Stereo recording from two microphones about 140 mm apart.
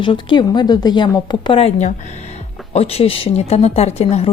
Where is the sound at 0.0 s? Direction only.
35° left (ahead or behind).